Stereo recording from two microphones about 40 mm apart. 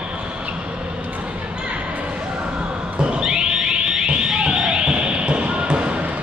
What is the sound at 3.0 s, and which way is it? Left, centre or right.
Neigh, right.